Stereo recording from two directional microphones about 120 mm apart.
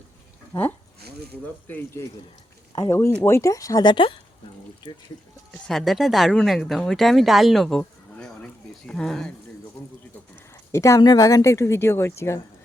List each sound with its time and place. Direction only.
1.6 s speech: 20° left (ahead or behind); by 5.0 s 35° left (ahead or behind)
5.6 s speech: centre (ahead or behind)
10.7 s speech: 25° left (ahead or behind)